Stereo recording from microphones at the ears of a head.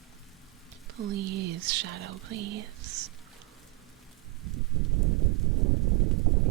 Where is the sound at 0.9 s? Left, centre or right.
Right.